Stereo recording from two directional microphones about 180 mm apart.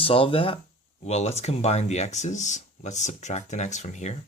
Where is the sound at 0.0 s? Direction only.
30° left (ahead or behind).